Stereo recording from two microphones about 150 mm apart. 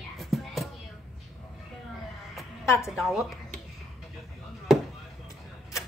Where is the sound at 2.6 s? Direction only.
20° left (ahead or behind).